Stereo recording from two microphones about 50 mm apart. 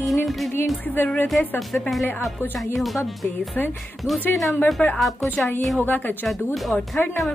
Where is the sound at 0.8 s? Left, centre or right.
Left.